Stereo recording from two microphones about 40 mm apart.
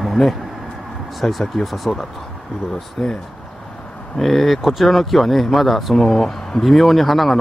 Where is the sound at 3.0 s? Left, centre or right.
Centre.